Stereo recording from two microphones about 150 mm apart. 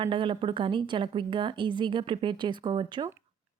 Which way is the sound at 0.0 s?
35° right (ahead or behind).